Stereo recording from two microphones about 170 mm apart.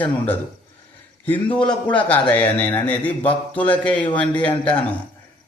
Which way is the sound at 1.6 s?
25° left (ahead or behind).